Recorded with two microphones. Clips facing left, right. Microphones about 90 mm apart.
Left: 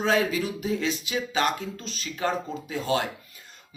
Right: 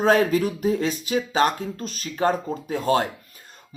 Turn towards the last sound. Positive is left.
turn(degrees=-45)  # may be behind; listen again after turning